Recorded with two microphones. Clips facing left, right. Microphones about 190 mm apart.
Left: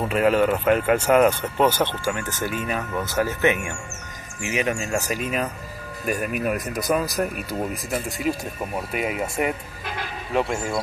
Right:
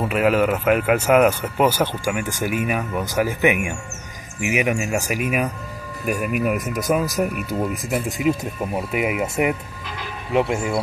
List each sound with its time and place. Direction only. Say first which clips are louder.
0.1 s speech: even; 5° right (ahead or behind)
7.9 s speech: right 5 dB; 20° right (ahead or behind)